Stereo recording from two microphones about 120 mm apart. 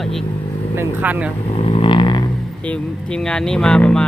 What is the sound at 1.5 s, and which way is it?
Vehicle, 50° left (ahead or behind).